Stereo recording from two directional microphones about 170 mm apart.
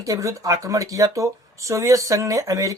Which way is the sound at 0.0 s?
20° right (ahead or behind).